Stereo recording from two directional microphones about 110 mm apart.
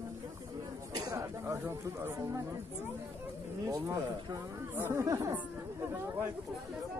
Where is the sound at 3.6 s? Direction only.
30° right (ahead or behind).